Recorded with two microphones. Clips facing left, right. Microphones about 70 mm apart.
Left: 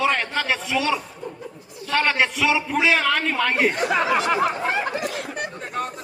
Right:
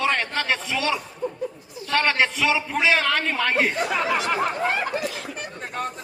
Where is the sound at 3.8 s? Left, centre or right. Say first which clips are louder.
Left 3 dB; left.